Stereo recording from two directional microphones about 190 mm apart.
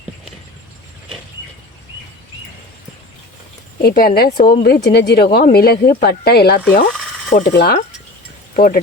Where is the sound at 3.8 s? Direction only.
55° left (ahead or behind).